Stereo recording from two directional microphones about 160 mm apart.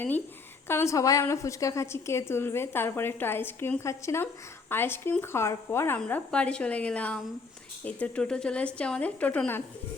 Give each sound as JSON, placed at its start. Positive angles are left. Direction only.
{"t": 0.7, "sound": "a woman's voice", "side_deg": 15}